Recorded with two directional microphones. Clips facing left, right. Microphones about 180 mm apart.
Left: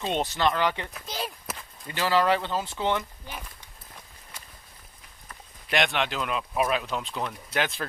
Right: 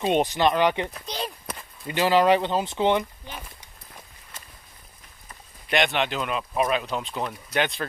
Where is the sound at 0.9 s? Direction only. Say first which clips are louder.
Right 2 dB; 5° left (ahead or behind).